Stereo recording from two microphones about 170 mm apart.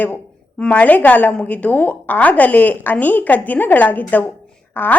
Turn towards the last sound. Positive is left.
turn(degrees=10)  # may be behind; listen again after turning